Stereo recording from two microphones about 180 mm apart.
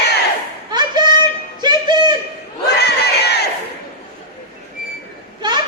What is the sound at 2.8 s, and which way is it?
Crowd, 65° left (ahead or behind).